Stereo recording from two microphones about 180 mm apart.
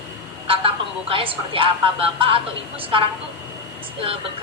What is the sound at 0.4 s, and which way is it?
A woman's voice, 30° right (ahead or behind).